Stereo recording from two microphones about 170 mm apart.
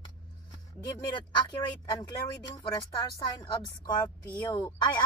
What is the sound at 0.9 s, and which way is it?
Speech, 20° left (ahead or behind).